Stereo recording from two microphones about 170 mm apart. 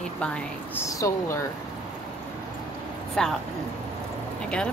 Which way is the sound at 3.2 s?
5° left (ahead or behind).